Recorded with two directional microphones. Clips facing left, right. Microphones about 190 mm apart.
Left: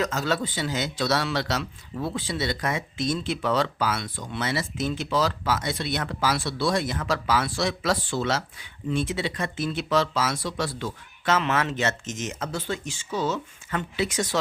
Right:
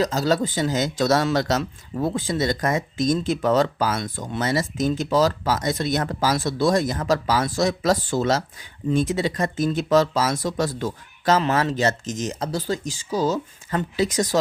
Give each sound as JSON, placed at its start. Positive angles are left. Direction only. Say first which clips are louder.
{"t": 0.0, "sound": "speech", "louder": "right 5 dB", "side_deg": -35}